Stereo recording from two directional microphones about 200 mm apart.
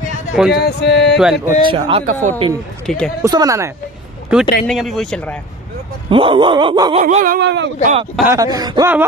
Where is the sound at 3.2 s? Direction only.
15° right (ahead or behind).